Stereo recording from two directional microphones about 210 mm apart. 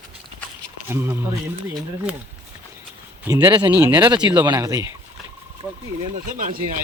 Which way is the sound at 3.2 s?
15° right (ahead or behind).